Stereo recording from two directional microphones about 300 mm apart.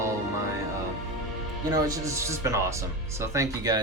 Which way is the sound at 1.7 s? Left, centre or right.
Centre.